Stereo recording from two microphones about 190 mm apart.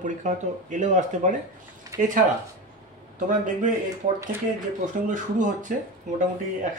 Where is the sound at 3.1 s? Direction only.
40° right (ahead or behind).